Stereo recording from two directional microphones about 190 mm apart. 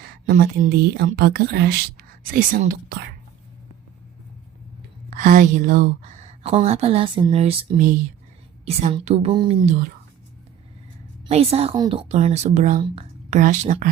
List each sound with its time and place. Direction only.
0.3 s a woman's voice: 50° right (ahead or behind)
5.1 s a woman's voice: 45° right (ahead or behind)
9.3 s speech: 25° right (ahead or behind)
11.3 s a woman's voice: 30° right (ahead or behind)